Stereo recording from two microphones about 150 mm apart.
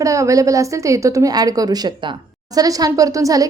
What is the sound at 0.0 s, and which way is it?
A woman's voice, 20° right (ahead or behind).